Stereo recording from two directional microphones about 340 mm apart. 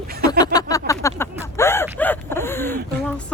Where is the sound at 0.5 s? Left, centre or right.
Centre.